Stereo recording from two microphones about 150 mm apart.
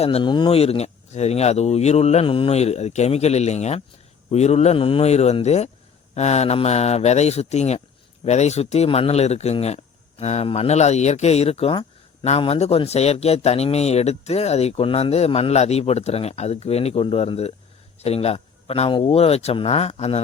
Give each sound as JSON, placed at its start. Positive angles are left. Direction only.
{"t": 0.0, "sound": "speech", "side_deg": 35}